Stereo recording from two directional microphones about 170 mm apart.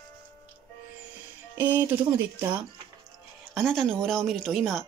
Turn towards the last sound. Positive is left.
turn(degrees=0)  # may be behind; listen again after turning